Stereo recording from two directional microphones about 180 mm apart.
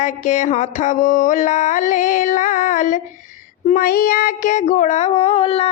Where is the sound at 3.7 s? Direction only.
55° left (ahead or behind).